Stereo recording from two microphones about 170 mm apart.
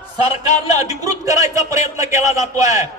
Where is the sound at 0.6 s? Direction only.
20° right (ahead or behind).